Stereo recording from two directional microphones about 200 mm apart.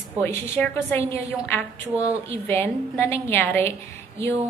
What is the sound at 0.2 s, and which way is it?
A woman's voice, 10° left (ahead or behind).